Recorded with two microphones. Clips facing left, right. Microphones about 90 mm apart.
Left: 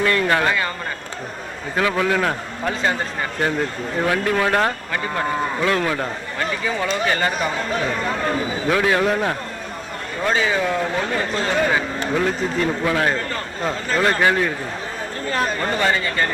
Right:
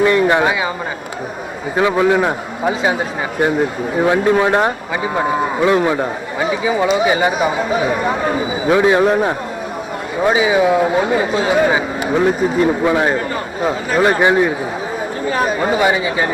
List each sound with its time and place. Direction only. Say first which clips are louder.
0.0 s a man's voice: right 6 dB; 20° right (ahead or behind)
1.7 s a man's voice: right 6 dB; 20° right (ahead or behind)